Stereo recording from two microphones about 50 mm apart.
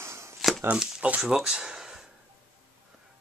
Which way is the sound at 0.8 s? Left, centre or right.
Centre.